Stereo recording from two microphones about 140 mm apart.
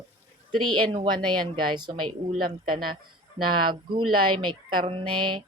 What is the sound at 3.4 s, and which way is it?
Speech, 35° right (ahead or behind).